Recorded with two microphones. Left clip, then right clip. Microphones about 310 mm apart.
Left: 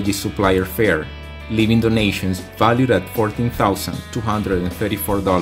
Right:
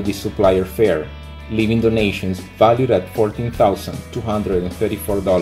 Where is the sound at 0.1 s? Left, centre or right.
Left.